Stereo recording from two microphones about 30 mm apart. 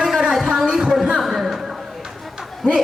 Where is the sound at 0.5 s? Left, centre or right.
Centre.